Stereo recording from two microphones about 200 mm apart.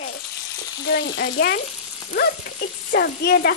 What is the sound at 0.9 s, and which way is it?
Speech, 55° left (ahead or behind).